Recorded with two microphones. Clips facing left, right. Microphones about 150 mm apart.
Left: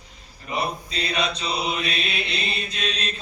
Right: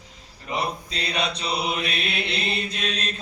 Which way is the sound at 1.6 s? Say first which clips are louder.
Even; 60° right (ahead or behind).